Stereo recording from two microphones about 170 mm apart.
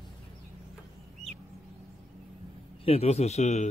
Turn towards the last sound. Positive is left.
turn(degrees=40)  # may be behind; listen again after turning